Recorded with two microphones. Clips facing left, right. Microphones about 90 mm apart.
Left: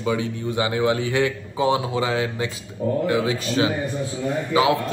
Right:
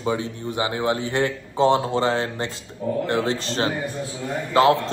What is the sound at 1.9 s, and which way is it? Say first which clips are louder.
Speech: right 1 dB; 40° right (ahead or behind).